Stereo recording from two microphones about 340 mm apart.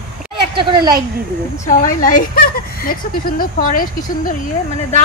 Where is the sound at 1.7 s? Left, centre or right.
Left.